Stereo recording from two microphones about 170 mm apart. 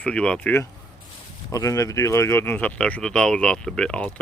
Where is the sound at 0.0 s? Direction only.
5° left (ahead or behind).